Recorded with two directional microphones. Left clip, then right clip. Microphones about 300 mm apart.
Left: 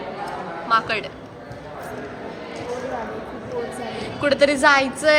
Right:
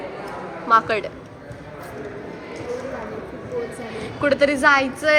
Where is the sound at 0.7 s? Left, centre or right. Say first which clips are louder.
Right 3 dB; centre.